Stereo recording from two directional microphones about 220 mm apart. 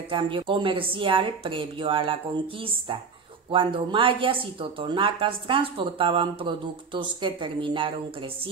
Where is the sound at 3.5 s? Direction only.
25° right (ahead or behind).